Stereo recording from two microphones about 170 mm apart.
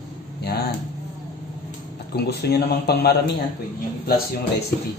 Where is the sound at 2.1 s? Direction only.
70° left (ahead or behind).